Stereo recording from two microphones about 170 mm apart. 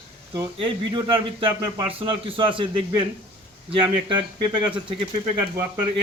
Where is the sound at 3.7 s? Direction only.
30° right (ahead or behind).